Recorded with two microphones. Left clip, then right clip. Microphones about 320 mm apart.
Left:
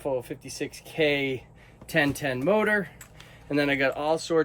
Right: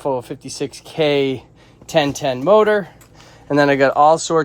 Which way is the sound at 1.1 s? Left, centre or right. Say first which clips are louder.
Right 10 dB; right.